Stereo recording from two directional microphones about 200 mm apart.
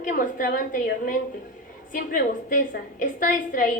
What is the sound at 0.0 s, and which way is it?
A woman's voice, 40° left (ahead or behind).